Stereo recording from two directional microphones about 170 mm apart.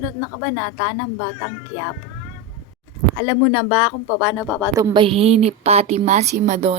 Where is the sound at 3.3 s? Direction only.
5° left (ahead or behind).